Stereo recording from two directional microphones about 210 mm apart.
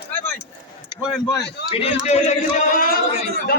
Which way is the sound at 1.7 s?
30° left (ahead or behind).